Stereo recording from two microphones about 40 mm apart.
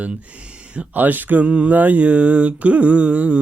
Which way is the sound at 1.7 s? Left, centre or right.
Right.